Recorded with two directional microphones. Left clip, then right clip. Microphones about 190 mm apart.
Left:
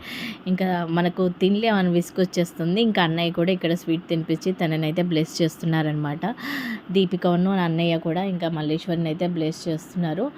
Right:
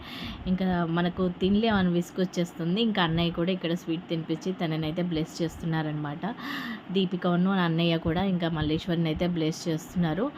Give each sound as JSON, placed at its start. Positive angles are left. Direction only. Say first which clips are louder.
{"t": 0.4, "sound": "speech", "louder": "left 4 dB", "side_deg": 35}